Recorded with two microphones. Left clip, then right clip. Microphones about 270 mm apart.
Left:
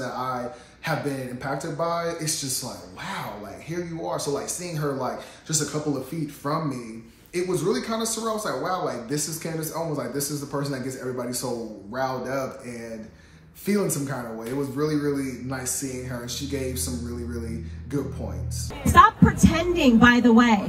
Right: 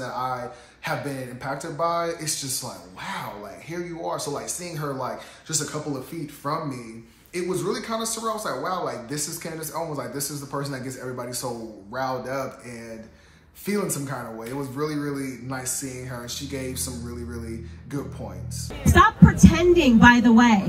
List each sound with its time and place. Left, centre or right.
0.0 s a sound: centre
0.8 s speech: centre
18.9 s a woman's voice: left